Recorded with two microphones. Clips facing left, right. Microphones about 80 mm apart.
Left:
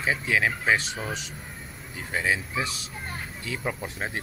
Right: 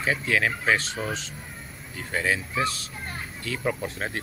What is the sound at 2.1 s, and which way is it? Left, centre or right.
Speech, centre.